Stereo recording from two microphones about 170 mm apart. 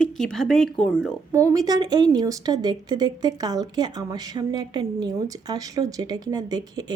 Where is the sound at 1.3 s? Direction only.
20° right (ahead or behind).